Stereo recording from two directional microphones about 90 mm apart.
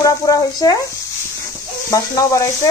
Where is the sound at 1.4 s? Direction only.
35° left (ahead or behind).